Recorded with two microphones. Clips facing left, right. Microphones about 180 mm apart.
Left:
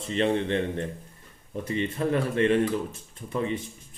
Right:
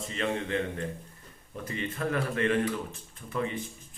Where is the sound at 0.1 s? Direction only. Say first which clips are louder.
Left 7 dB; 30° left (ahead or behind).